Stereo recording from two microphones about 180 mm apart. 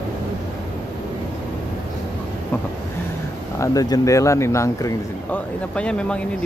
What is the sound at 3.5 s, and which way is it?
Speech, 20° left (ahead or behind).